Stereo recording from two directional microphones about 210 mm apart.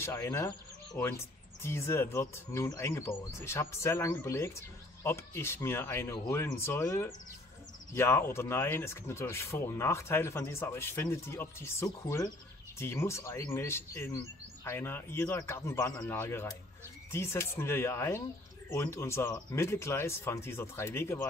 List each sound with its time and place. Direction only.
0.0 s speech: 10° left (ahead or behind)